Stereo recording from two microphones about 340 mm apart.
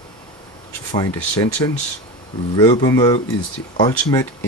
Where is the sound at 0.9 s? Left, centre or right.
Centre.